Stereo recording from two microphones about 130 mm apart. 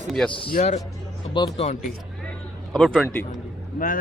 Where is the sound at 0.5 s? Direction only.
65° left (ahead or behind).